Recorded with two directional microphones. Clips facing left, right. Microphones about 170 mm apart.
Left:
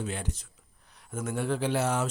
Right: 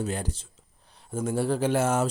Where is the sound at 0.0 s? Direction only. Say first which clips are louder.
Right 4 dB; 40° right (ahead or behind).